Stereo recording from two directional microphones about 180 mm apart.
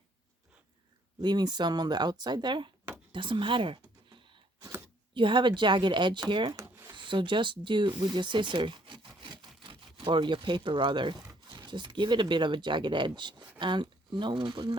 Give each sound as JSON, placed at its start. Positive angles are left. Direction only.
{"t": 1.2, "sound": "speech", "side_deg": -25}
{"t": 3.1, "sound": "a sound", "side_deg": -25}
{"t": 5.1, "sound": "speech", "side_deg": -25}
{"t": 6.9, "sound": "speech", "side_deg": -25}